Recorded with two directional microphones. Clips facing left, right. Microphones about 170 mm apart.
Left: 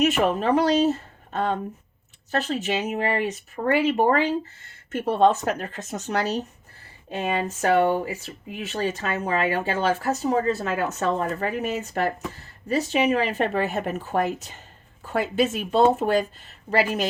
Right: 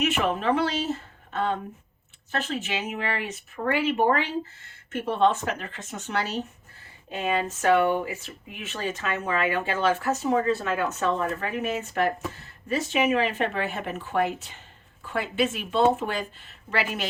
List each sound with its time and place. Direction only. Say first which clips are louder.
0.0 s speech: left 4 dB; 40° left (ahead or behind)